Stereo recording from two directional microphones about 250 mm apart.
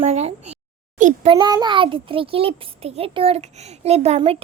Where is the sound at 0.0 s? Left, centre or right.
Right.